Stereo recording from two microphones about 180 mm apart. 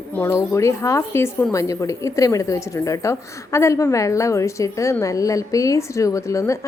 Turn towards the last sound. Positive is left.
turn(degrees=15)  # may be behind; listen again after turning